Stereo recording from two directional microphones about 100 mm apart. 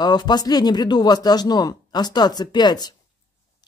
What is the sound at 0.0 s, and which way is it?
Speech, 45° left (ahead or behind).